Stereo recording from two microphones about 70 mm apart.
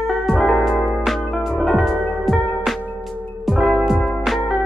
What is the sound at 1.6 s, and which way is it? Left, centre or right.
Music, centre.